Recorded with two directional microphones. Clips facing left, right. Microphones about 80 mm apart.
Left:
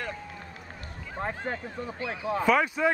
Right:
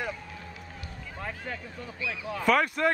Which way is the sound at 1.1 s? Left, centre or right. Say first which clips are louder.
Left 5 dB; left.